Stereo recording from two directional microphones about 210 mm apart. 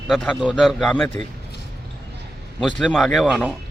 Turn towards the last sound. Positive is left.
turn(degrees=0)  # may be behind; listen again after turning